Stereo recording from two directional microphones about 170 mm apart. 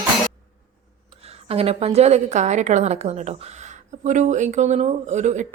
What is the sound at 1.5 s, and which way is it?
A woman's voice, 35° right (ahead or behind).